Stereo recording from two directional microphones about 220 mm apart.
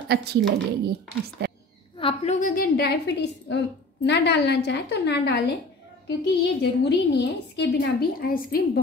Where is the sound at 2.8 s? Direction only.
50° left (ahead or behind).